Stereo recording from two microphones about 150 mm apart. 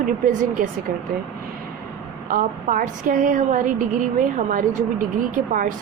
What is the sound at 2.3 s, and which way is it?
A woman's voice, 65° right (ahead or behind).